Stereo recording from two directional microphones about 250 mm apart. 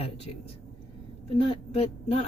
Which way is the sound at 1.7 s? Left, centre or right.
Left.